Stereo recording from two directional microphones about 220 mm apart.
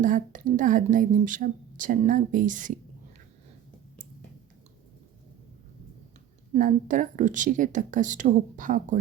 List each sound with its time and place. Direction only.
0.0 s a woman's voice: 35° right (ahead or behind)
6.5 s a woman's voice: 35° right (ahead or behind)